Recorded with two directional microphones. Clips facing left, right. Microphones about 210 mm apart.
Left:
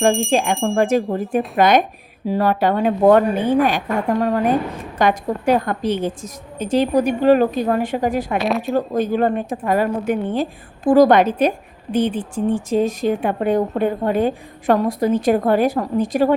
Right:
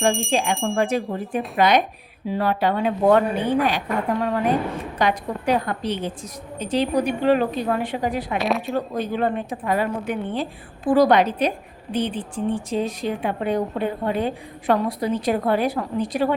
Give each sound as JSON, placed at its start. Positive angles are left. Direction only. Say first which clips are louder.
{"t": 0.0, "sound": "speech", "louder": "left 4 dB", "side_deg": 0}
{"t": 0.8, "sound": "a woman's voice", "louder": "left 7 dB", "side_deg": 45}
{"t": 8.4, "sound": "speech", "louder": "left 3 dB", "side_deg": 0}
{"t": 8.9, "sound": "a woman's voice", "louder": "left 6 dB", "side_deg": 45}